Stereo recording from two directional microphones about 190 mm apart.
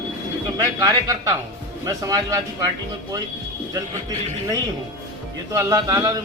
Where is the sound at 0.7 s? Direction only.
20° right (ahead or behind).